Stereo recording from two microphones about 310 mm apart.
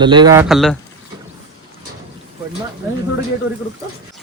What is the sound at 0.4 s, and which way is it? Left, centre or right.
Speech, centre.